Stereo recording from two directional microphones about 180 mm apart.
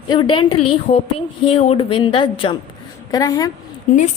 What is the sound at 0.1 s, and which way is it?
A woman's voice, 25° left (ahead or behind).